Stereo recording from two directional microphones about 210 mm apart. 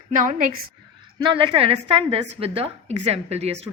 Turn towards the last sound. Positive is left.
turn(degrees=-30)  # may be behind; listen again after turning